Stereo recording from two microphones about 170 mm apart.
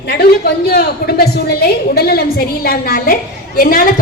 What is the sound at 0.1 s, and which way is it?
A woman's voice, 65° left (ahead or behind).